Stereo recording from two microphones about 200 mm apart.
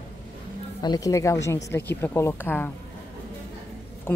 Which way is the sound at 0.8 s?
20° left (ahead or behind).